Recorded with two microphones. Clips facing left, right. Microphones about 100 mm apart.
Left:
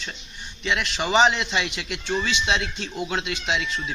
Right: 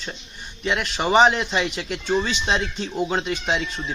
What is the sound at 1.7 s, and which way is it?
Speech, 45° right (ahead or behind).